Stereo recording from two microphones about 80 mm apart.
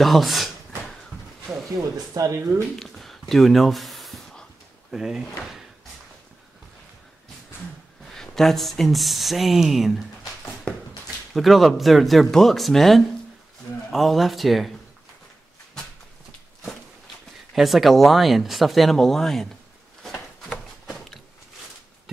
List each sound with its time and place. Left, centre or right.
0.0 s speech: centre
2.1 s speech: right
2.7 s a sound: centre
4.9 s speech: centre
8.1 s speech: centre
10.7 s a sound: centre
11.3 s speech: centre
17.6 s speech: centre
20.0 s a sound: centre